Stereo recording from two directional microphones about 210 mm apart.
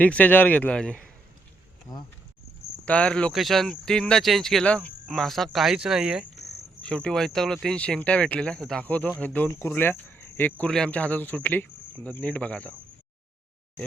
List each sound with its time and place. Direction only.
0.0 s speech: 5° left (ahead or behind)
1.9 s speech: 15° left (ahead or behind)
2.8 s speech: 5° left (ahead or behind)